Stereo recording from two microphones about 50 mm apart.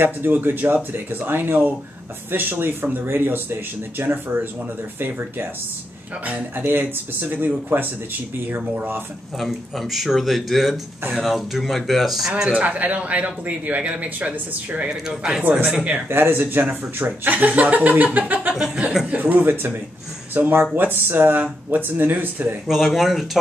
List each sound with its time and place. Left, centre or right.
0.0 s speech: right
6.5 s speech: right
9.4 s speech: centre
12.5 s speech: right
14.9 s speech: centre
15.7 s speech: right
16.1 s speech: right
18.8 s speech: centre
19.1 s speech: right
22.7 s speech: centre